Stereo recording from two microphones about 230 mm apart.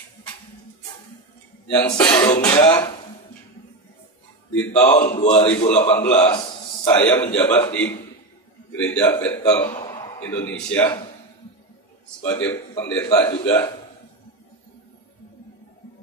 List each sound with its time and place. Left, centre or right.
1.7 s a man's voice: centre
4.8 s a man's voice: left
5.9 s a man's voice: centre
12.2 s a man's voice: centre